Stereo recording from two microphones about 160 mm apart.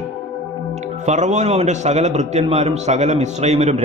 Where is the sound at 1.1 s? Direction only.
45° right (ahead or behind).